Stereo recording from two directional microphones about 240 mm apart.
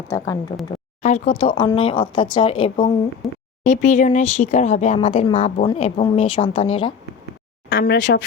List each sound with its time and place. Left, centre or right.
1.0 s speech: left
3.2 s speech: centre
3.6 s speech: left
7.7 s speech: left